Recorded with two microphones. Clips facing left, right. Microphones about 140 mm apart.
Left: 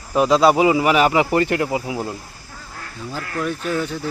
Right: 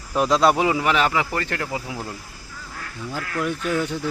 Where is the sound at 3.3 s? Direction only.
15° right (ahead or behind).